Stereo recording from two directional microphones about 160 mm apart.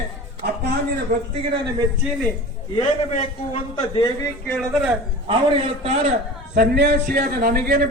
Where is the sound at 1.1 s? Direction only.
60° right (ahead or behind).